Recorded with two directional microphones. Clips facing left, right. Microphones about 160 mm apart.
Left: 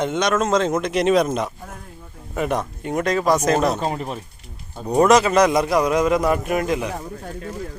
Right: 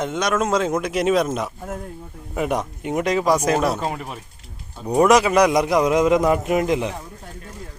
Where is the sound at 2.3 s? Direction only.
15° right (ahead or behind).